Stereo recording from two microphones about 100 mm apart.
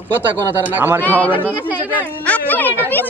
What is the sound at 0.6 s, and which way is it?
Speech, 20° right (ahead or behind).